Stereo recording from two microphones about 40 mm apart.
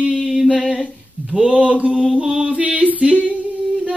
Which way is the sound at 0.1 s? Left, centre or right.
Centre.